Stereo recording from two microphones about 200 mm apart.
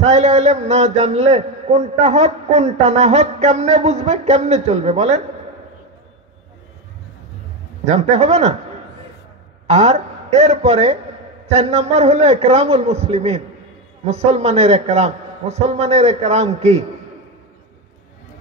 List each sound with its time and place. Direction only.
0.0 s a man's voice: 35° right (ahead or behind)
7.8 s a man's voice: 35° right (ahead or behind)
9.7 s a man's voice: 35° right (ahead or behind)